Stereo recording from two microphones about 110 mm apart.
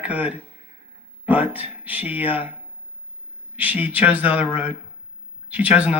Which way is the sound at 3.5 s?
15° right (ahead or behind).